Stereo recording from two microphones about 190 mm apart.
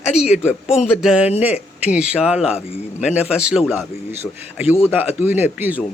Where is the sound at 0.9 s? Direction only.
5° right (ahead or behind).